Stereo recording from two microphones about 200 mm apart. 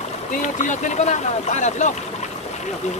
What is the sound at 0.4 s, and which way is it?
Speech, 40° left (ahead or behind).